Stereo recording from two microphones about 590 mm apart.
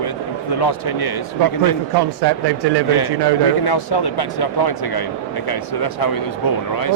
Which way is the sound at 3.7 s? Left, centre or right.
Left.